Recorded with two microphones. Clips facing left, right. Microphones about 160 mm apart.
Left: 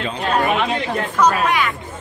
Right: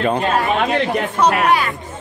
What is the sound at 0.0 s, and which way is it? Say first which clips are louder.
Speech: right 7 dB; 50° right (ahead or behind).